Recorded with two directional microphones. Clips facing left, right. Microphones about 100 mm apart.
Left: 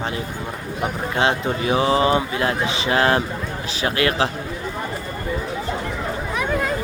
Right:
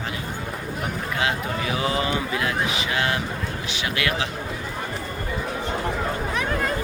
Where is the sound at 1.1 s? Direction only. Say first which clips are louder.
Left 5 dB; 30° left (ahead or behind).